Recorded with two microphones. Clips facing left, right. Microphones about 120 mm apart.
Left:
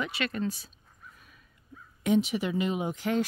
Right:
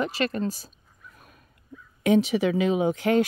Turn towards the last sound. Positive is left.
turn(degrees=-65)  # may be behind; listen again after turning